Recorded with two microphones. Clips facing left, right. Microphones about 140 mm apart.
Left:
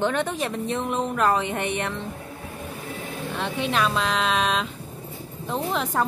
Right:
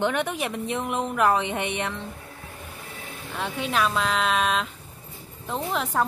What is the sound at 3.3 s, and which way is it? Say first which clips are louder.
A woman's voice: left 1 dB; 10° right (ahead or behind).